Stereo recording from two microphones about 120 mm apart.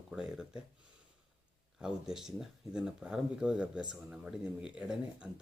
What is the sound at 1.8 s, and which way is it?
Speech, 5° right (ahead or behind).